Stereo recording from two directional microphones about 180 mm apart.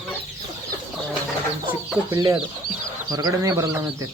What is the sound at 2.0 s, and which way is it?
Speech, 20° right (ahead or behind).